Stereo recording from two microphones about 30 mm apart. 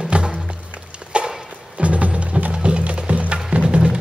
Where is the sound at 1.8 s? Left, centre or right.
Right.